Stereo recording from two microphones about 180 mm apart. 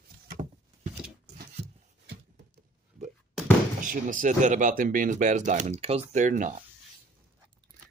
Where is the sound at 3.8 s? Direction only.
45° right (ahead or behind).